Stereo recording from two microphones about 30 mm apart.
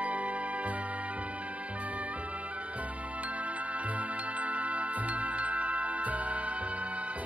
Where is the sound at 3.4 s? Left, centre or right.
Right.